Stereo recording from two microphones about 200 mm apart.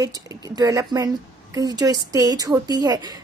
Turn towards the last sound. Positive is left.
turn(degrees=-20)  # may be behind; listen again after turning